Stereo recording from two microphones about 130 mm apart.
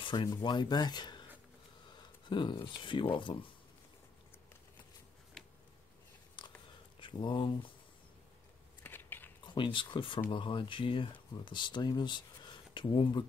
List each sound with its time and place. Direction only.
0.0 s speech: 35° left (ahead or behind)
5.4 s a sound: 5° right (ahead or behind)
6.4 s a sound: 35° left (ahead or behind)
7.0 s speech: 40° left (ahead or behind)
8.8 s biting: 15° left (ahead or behind)
9.5 s speech: 40° left (ahead or behind)